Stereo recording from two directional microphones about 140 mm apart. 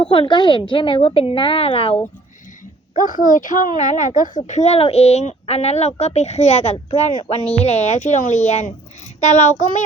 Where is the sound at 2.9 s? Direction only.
70° left (ahead or behind).